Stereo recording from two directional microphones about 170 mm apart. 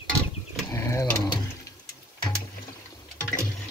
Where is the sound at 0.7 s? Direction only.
20° left (ahead or behind).